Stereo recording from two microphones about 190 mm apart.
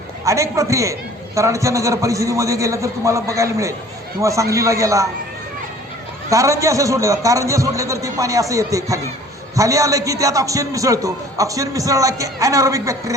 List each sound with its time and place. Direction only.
0.3 s a man's voice: 15° right (ahead or behind)
6.3 s a man's voice: 15° right (ahead or behind)